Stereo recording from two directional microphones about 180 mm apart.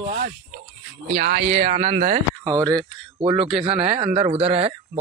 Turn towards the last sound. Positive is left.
turn(degrees=-35)  # may be behind; listen again after turning